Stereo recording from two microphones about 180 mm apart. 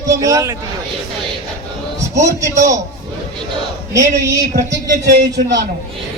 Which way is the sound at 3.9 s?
20° right (ahead or behind).